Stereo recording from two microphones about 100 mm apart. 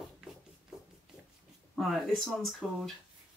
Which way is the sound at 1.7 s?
Centre (ahead or behind).